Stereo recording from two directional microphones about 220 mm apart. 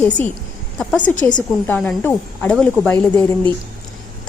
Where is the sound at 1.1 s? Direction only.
35° left (ahead or behind).